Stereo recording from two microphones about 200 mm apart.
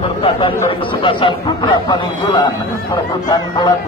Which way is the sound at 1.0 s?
25° left (ahead or behind).